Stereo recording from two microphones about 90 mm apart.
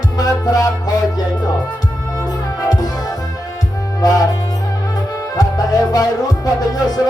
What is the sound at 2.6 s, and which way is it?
Music, 45° left (ahead or behind).